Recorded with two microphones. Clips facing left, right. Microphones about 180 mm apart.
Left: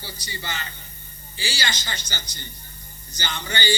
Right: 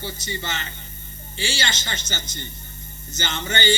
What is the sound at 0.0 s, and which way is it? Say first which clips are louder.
A man's voice: right 5 dB; 25° right (ahead or behind).